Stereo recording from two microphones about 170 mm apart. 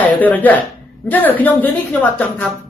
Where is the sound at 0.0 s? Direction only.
10° left (ahead or behind).